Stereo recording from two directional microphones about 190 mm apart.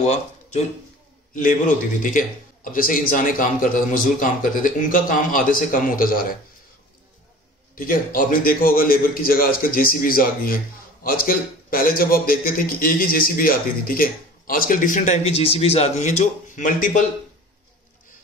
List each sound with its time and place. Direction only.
0.0 s speech: 35° left (ahead or behind)
2.0 s a man's voice: 45° left (ahead or behind)
7.7 s a man's voice: 45° left (ahead or behind)